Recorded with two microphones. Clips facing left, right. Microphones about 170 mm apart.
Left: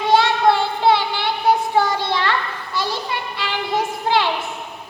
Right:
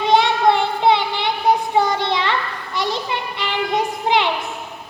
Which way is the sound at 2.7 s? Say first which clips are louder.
Right 2 dB; 20° right (ahead or behind).